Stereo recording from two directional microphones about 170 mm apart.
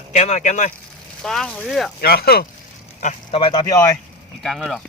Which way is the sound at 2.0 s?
65° left (ahead or behind).